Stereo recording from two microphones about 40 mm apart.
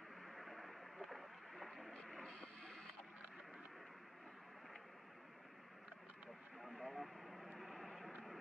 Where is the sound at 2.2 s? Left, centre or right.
Centre.